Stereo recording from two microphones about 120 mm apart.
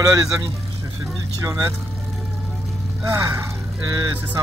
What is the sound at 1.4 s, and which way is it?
Speech, 25° right (ahead or behind).